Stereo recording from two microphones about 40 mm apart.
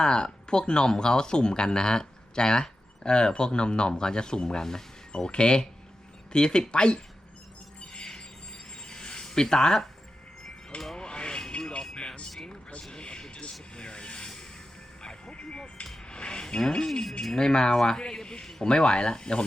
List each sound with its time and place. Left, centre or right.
0.0 s speech: left
7.8 s music: left
8.9 s a sound: left
10.9 s radio: left
11.9 s a sound: left
13.7 s vehicle: left
15.0 s music: left
16.4 s speech: centre